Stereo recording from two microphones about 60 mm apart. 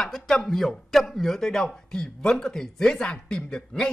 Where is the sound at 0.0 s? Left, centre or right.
Centre.